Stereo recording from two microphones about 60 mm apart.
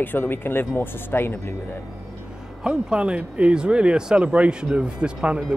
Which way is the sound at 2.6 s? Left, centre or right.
Centre.